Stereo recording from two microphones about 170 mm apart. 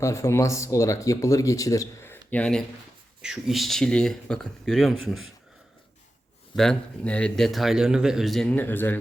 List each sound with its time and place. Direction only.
0.0 s speech: 15° left (ahead or behind); by 5.2 s centre (ahead or behind)
6.6 s speech: 5° left (ahead or behind)